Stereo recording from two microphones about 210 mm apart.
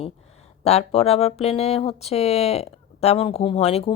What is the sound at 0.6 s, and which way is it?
A woman's voice, 30° left (ahead or behind).